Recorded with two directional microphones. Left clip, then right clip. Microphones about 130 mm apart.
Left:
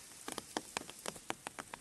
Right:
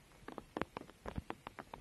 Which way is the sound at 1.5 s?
70° left (ahead or behind).